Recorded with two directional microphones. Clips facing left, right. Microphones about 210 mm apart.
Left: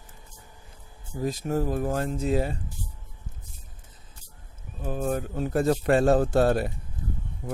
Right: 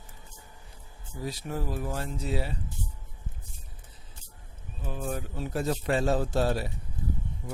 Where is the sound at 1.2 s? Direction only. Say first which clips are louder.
Left 7 dB; 45° left (ahead or behind).